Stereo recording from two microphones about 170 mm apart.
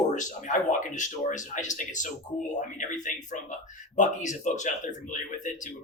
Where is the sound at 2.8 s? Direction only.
50° left (ahead or behind).